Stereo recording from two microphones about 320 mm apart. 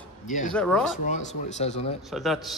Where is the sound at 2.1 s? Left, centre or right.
Centre.